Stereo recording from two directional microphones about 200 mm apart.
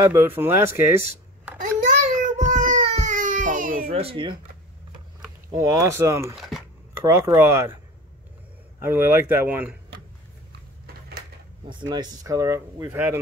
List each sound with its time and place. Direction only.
0.0 s speech: 10° right (ahead or behind)
1.6 s a sound: 40° right (ahead or behind)
2.8 s baby cry: 40° right (ahead or behind)
3.9 s speech: 30° right (ahead or behind)
5.5 s speech: 15° right (ahead or behind)
6.3 s a sound: centre (ahead or behind)
7.1 s speech: 15° right (ahead or behind)
8.8 s speech: 10° right (ahead or behind)
11.6 s speech: 20° right (ahead or behind)